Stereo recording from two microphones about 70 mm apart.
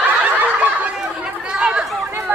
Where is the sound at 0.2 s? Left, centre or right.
Right.